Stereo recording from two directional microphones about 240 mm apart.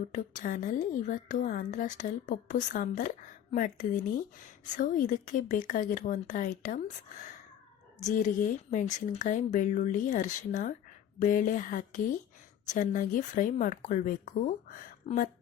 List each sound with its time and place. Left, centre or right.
0.1 s a woman's voice: left
8.0 s a woman's voice: left